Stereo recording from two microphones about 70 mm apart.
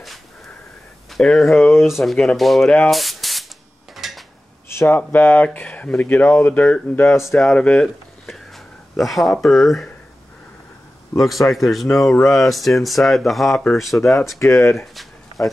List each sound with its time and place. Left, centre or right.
1.1 s speech: centre
3.9 s a sound: centre
4.6 s a sound: left
5.3 s speech: left
7.0 s speech: left
7.3 s speech: centre
8.9 s speech: centre
11.1 s speech: centre
15.0 s a sound: centre